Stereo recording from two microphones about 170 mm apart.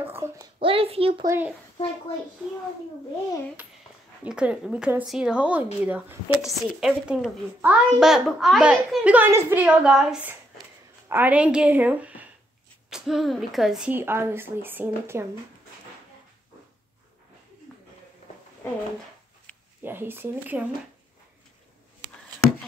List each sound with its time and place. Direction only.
0.0 s a child's voice: 15° right (ahead or behind)
0.6 s a child's voice: 35° right (ahead or behind)
1.2 s speech: 15° right (ahead or behind)
4.2 s a woman's voice: 5° right (ahead or behind)
19.8 s speech: 10° right (ahead or behind)